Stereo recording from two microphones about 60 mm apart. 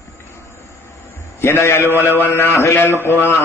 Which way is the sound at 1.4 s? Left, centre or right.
Left.